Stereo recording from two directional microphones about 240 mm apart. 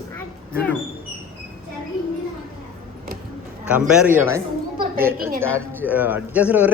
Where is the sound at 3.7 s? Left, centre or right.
Centre.